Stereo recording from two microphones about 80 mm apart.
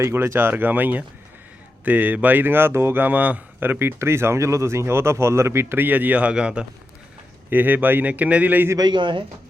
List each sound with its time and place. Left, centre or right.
0.0 s speech: right; by 6.7 s centre
7.5 s speech: right
8.8 s a man's voice: right